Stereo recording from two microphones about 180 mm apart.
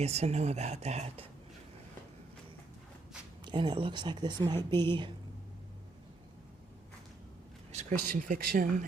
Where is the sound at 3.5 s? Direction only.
25° right (ahead or behind).